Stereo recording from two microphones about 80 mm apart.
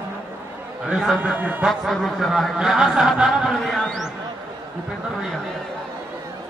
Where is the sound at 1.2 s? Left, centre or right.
Centre.